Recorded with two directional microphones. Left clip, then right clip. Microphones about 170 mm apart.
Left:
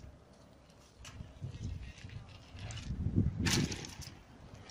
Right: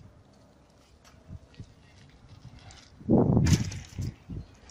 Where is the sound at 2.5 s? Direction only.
20° left (ahead or behind).